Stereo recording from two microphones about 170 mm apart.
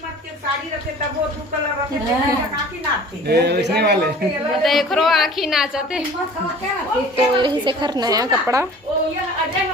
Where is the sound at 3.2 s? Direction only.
75° right (ahead or behind).